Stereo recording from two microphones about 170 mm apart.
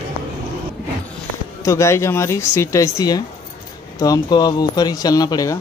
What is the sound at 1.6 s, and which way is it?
Speech, 15° left (ahead or behind).